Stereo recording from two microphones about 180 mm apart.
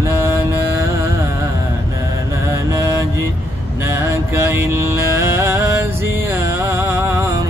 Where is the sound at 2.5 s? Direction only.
15° right (ahead or behind).